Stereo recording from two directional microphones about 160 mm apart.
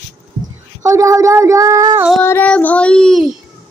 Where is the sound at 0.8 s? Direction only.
20° right (ahead or behind).